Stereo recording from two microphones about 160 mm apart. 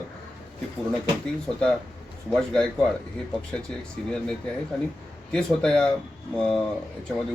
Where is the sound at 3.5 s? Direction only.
5° left (ahead or behind).